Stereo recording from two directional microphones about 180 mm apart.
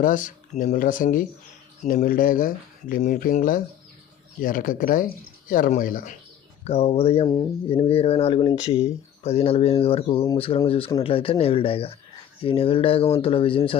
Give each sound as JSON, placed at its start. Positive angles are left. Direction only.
{"t": 0.0, "sound": "speech", "side_deg": 50}
{"t": 6.7, "sound": "speech", "side_deg": 35}